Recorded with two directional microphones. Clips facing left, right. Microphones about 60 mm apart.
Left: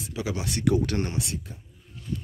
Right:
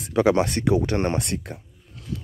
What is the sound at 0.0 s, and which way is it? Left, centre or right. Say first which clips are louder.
Speech: right 12 dB; right.